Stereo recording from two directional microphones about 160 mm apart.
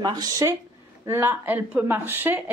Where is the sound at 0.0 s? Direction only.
25° right (ahead or behind).